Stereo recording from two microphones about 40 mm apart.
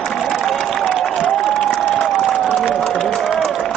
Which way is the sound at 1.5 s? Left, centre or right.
Centre.